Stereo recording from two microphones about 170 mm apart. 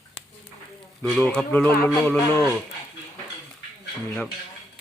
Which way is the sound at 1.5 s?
15° left (ahead or behind).